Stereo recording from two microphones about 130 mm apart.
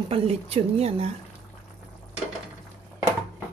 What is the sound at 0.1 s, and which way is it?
A woman's voice, 50° right (ahead or behind).